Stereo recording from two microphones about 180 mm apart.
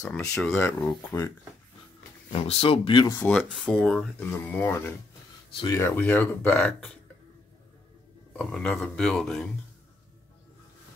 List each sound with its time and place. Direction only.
0.0 s speech: 5° left (ahead or behind)
0.6 s speech: 15° left (ahead or behind)
2.3 s speech: 30° left (ahead or behind)
3.1 s speech: 5° left (ahead or behind)
8.3 s speech: 5° left (ahead or behind)